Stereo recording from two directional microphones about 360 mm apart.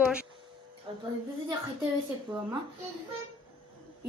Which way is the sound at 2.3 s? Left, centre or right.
Centre.